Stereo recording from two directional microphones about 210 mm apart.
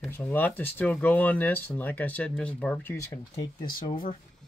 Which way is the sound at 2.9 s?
15° left (ahead or behind).